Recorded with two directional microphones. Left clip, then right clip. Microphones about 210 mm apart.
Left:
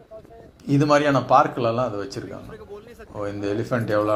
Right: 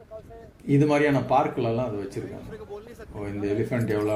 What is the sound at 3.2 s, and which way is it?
Speech, centre (ahead or behind).